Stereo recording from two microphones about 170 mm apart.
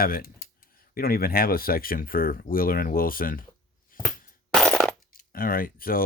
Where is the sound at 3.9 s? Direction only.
55° left (ahead or behind).